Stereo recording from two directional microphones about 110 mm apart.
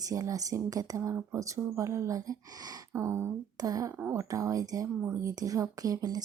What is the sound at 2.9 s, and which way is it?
Speech, 25° right (ahead or behind).